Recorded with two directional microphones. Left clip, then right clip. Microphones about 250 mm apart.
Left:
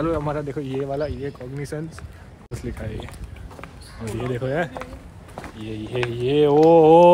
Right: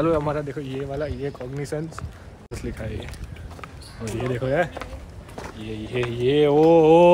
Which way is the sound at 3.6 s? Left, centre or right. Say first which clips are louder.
Even; centre.